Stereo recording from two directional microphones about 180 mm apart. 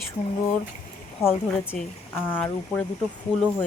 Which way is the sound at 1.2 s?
10° left (ahead or behind).